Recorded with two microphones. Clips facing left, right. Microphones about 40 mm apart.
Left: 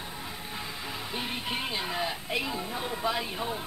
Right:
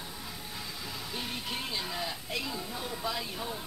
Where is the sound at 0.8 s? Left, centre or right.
Left.